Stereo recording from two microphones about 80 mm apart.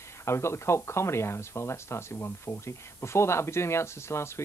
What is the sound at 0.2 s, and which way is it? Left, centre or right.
Speech, left.